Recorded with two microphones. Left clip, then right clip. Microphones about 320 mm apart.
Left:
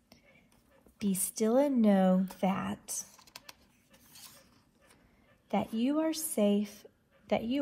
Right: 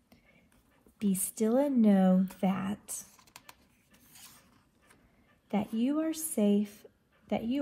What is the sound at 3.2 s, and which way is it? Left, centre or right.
Typing, centre.